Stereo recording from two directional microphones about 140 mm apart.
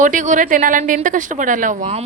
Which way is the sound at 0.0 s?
65° right (ahead or behind).